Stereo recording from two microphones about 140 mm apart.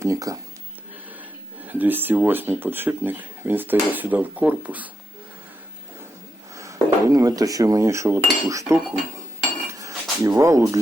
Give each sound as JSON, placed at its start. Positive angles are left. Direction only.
{"t": 0.0, "sound": "speech", "side_deg": -25}
{"t": 1.6, "sound": "speech", "side_deg": -15}
{"t": 6.5, "sound": "cutlery", "side_deg": -20}
{"t": 9.8, "sound": "a sound", "side_deg": -20}